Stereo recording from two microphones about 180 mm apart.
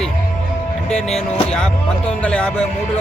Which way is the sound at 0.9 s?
5° left (ahead or behind).